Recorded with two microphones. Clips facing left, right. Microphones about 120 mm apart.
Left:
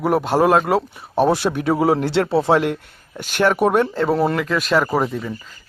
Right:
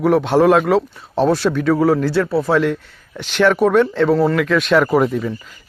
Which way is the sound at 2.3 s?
25° left (ahead or behind).